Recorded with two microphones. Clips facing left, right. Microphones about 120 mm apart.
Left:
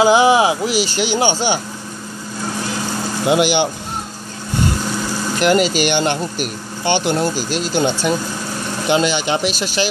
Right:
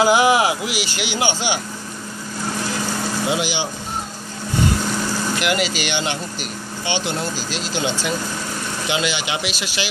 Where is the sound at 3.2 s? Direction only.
60° left (ahead or behind).